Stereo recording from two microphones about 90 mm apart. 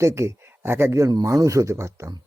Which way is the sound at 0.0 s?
30° right (ahead or behind).